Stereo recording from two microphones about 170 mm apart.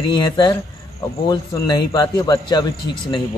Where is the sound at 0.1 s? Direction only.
25° left (ahead or behind).